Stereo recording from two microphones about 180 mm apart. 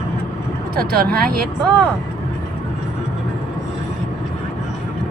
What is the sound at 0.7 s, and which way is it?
Speech, 55° right (ahead or behind).